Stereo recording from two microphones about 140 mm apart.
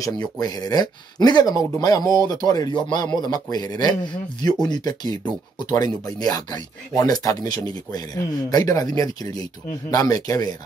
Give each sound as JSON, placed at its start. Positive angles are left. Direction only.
{"t": 0.0, "sound": "speech", "side_deg": 30}